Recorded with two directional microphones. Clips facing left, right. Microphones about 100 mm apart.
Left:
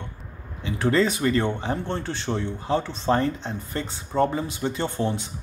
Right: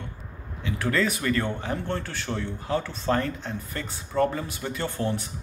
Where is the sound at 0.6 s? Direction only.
25° left (ahead or behind).